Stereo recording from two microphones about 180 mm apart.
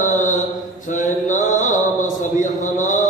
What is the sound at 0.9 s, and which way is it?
Mantra, 45° left (ahead or behind).